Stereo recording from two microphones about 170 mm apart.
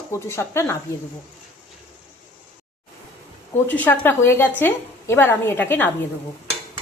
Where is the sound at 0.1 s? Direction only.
15° left (ahead or behind).